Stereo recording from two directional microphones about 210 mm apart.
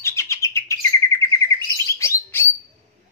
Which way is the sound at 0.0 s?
15° left (ahead or behind).